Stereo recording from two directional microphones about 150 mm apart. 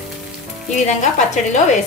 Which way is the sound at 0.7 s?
50° left (ahead or behind).